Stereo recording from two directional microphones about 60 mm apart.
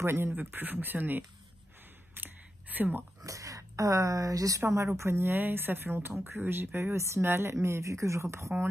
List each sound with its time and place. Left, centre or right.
0.0 s speech: right
0.4 s speech: right
2.1 s a sound: right
3.2 s a woman's voice: right
5.4 s speech: right
7.5 s speech: right